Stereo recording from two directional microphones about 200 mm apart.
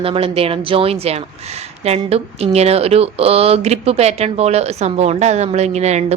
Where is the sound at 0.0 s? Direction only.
30° right (ahead or behind).